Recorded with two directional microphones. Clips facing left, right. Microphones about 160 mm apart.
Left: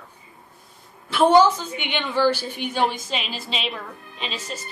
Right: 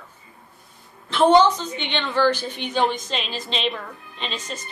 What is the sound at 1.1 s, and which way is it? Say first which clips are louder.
A woman's voice: even; 10° left (ahead or behind).